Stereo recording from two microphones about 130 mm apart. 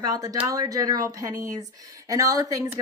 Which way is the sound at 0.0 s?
30° right (ahead or behind).